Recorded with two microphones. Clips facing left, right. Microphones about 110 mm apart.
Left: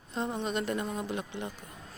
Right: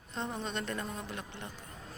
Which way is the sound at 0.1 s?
5° left (ahead or behind).